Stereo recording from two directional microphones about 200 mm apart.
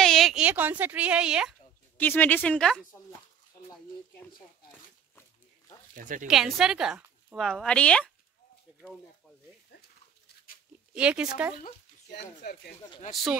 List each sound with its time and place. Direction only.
0.0 s a sound: centre (ahead or behind)
2.0 s speech: 10° left (ahead or behind)
5.9 s speech: 40° right (ahead or behind)
6.2 s a woman's voice: centre (ahead or behind)
9.8 s goat: 50° left (ahead or behind)
11.0 s speech: 5° right (ahead or behind)
11.5 s speech: 55° left (ahead or behind)
13.1 s speech: centre (ahead or behind)